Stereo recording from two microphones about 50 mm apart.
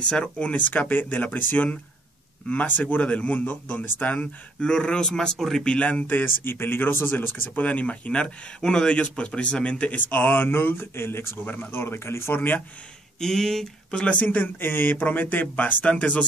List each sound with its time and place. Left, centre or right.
0.0 s speech: left
4.2 s speech: centre
5.7 s speech: left
7.6 s speech: left
13.2 s speech: centre
13.8 s speech: left